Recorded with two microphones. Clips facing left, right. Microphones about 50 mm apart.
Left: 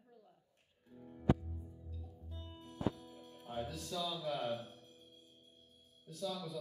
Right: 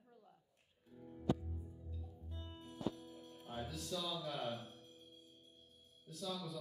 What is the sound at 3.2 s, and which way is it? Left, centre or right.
Music, left.